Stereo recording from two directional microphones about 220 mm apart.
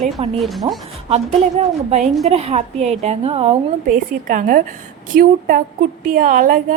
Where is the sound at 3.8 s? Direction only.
40° right (ahead or behind).